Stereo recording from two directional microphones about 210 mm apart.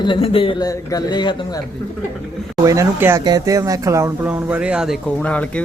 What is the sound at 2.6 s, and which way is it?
Speech, 15° right (ahead or behind).